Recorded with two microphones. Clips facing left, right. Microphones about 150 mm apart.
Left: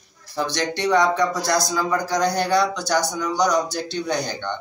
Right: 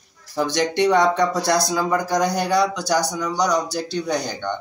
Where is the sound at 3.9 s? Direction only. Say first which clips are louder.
Right 1 dB; 5° right (ahead or behind).